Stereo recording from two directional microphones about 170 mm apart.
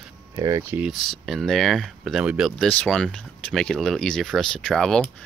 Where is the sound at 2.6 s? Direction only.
5° left (ahead or behind).